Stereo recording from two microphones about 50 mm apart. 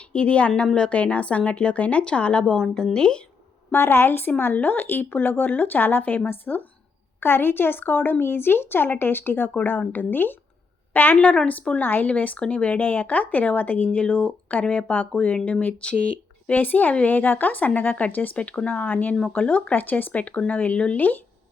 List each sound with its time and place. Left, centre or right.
0.1 s a woman's voice: left
3.7 s a woman's voice: left
11.4 s a woman's voice: left
11.8 s a woman's voice: left
12.0 s a woman's voice: left
16.6 s a woman's voice: left
20.7 s a woman's voice: left